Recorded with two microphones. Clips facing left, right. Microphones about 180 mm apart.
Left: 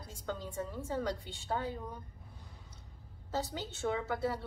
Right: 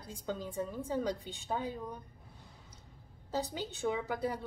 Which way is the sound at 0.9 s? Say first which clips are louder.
Right 1 dB; 15° right (ahead or behind).